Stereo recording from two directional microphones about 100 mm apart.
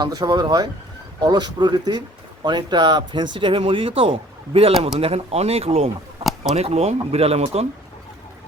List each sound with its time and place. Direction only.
0.0 s speech: 45° right (ahead or behind); by 4.7 s 70° right (ahead or behind)
4.9 s speech: 80° right